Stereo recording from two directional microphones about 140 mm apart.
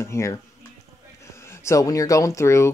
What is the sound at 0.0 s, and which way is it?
Speech, 20° left (ahead or behind).